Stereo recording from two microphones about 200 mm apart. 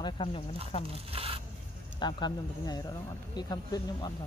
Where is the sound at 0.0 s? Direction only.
25° left (ahead or behind).